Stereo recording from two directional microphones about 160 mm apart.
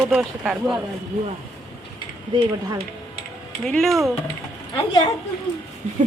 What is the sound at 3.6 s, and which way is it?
Speech, 5° left (ahead or behind).